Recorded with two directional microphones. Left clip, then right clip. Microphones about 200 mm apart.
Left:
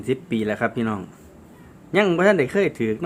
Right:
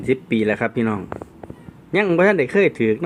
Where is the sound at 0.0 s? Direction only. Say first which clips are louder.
Right 5 dB; 15° right (ahead or behind).